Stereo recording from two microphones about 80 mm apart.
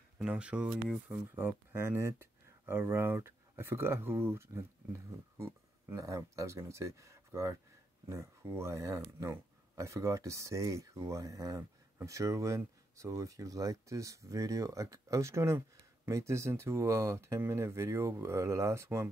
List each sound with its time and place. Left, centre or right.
0.2 s speech: centre
1.3 s speech: right